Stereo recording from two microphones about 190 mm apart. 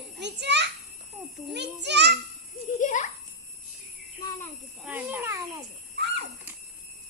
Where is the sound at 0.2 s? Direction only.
65° right (ahead or behind).